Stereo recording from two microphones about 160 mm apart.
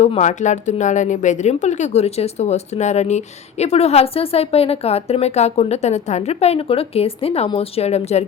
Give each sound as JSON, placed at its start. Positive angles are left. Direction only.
{"t": 0.0, "sound": "speech", "side_deg": 45}